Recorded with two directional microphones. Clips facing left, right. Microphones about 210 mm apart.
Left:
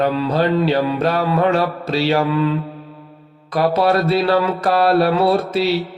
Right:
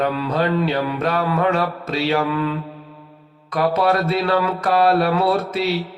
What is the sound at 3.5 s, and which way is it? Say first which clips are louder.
Mantra: left 2 dB; 35° left (ahead or behind).